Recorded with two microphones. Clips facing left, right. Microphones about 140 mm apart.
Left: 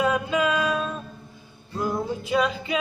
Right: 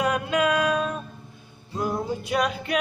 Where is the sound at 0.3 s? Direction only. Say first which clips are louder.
Right 1 dB; 5° right (ahead or behind).